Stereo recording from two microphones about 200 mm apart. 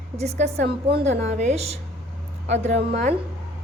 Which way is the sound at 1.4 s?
35° right (ahead or behind).